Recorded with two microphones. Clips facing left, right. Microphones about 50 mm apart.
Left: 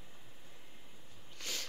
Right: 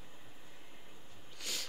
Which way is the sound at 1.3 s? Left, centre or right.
Centre.